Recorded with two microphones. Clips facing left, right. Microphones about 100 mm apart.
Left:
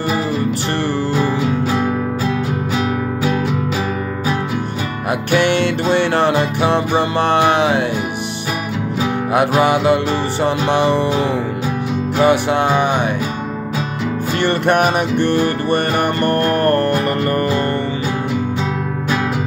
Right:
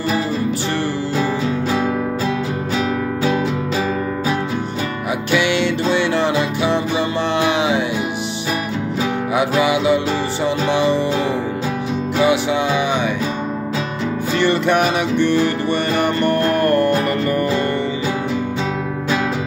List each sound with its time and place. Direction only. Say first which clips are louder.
5.3 s music: left 2 dB; 50° left (ahead or behind)
9.3 s music: left 3 dB; 55° left (ahead or behind)
12.2 s music: left 3 dB; 50° left (ahead or behind)
14.4 s music: left 1 dB; 50° left (ahead or behind)